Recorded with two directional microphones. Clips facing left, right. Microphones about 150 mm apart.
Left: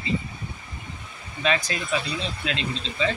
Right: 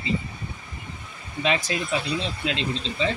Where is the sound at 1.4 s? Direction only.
20° right (ahead or behind).